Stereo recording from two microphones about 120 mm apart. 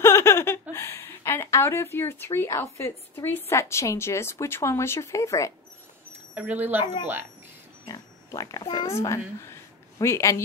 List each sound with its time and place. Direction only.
0.0 s a woman's voice: 20° left (ahead or behind)
6.3 s speech: 15° right (ahead or behind)
6.8 s speech: 40° left (ahead or behind)
7.8 s pig: 30° left (ahead or behind)
8.7 s a child's voice: 25° left (ahead or behind)